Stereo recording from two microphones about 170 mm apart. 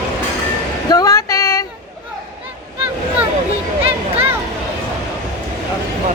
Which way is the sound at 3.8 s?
35° right (ahead or behind).